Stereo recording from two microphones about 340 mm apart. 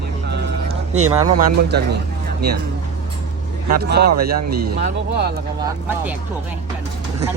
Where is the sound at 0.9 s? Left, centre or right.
Right.